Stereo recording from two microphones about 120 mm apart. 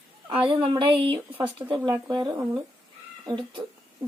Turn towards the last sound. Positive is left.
turn(degrees=-45)  # may be behind; listen again after turning